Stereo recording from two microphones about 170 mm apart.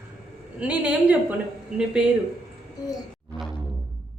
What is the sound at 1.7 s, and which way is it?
Child singing, 5° right (ahead or behind).